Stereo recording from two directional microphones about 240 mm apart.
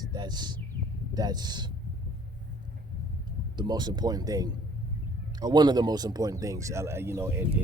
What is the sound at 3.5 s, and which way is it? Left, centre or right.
A man's voice, centre.